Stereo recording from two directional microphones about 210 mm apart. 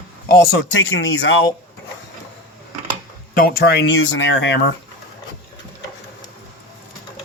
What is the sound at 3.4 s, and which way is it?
Speech, 45° left (ahead or behind).